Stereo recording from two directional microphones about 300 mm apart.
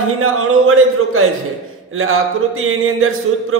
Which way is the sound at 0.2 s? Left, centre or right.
Right.